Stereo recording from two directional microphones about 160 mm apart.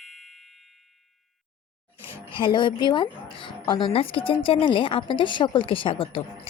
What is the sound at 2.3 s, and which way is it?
A woman's voice, 30° left (ahead or behind).